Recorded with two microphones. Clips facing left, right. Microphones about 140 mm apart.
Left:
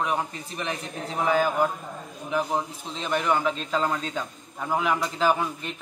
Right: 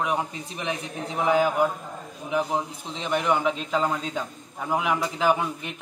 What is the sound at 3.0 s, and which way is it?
A man's voice, 15° right (ahead or behind).